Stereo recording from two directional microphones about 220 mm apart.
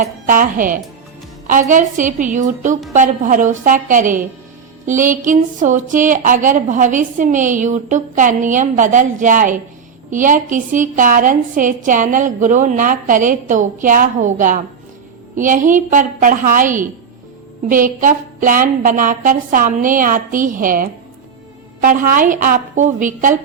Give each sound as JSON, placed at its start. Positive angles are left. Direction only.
{"t": 0.0, "sound": "a woman's voice", "side_deg": -40}